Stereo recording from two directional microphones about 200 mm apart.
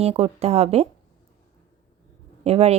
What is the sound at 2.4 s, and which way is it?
Speech, 30° right (ahead or behind).